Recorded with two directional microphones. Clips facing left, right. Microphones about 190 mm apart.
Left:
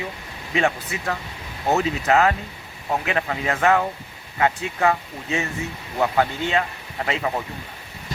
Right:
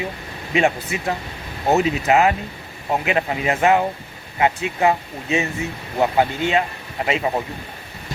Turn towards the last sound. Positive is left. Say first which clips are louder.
# right 3 dB
turn(degrees=-20)  # may be behind; listen again after turning